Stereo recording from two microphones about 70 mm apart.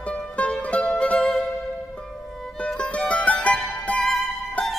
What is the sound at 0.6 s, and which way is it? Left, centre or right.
Music, centre.